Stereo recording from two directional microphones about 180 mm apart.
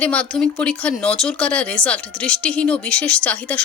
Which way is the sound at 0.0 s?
10° left (ahead or behind).